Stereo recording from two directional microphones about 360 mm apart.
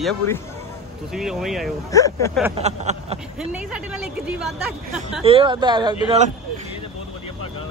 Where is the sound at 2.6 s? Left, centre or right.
Centre.